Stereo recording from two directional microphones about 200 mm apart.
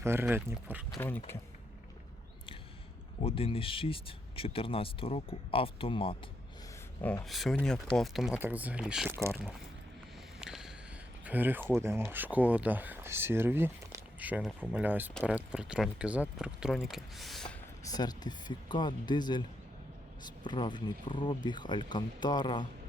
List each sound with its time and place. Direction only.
0.0 s speech: 10° right (ahead or behind)
0.9 s speech: 15° left (ahead or behind)
3.2 s speech: 30° left (ahead or behind)
7.0 s speech: 5° left (ahead or behind)
10.4 s a sound: centre (ahead or behind)
11.3 s speech: 10° right (ahead or behind)
17.8 s speech: 20° left (ahead or behind)